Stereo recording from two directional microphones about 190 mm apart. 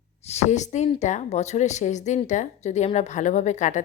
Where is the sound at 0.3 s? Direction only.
35° left (ahead or behind).